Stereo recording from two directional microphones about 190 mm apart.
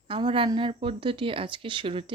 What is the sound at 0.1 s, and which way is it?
Speech, 25° right (ahead or behind).